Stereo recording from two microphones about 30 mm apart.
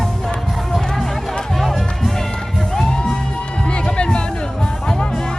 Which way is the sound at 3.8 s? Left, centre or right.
Left.